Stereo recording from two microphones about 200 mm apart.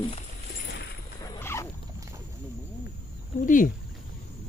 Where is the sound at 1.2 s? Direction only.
15° left (ahead or behind).